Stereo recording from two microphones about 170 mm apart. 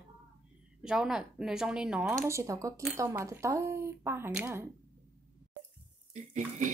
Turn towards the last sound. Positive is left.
turn(degrees=-45)  # may be behind; listen again after turning